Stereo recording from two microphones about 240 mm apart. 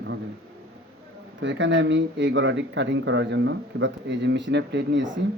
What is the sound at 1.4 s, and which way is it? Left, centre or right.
Speech, right.